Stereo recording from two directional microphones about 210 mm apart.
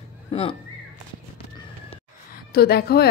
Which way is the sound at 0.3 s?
30° left (ahead or behind).